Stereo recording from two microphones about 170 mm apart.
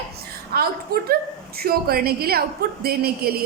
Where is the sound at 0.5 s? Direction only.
65° right (ahead or behind).